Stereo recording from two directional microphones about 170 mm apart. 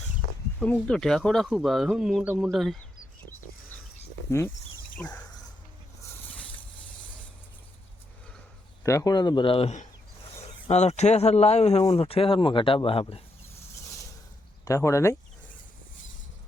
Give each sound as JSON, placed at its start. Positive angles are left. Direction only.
{"t": 0.6, "sound": "speech", "side_deg": 5}
{"t": 4.3, "sound": "speech", "side_deg": 15}
{"t": 8.8, "sound": "speech", "side_deg": 15}
{"t": 14.6, "sound": "speech", "side_deg": 20}